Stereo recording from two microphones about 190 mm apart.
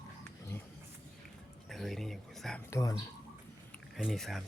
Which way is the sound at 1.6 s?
Centre (ahead or behind).